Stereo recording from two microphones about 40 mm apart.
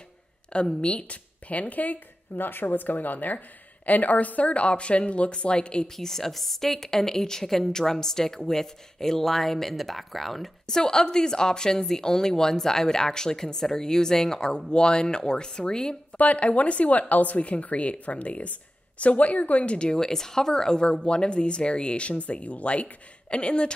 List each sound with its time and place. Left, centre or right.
0.7 s speech: left
5.9 s a woman's voice: centre
10.7 s a woman's voice: centre
16.2 s speech: left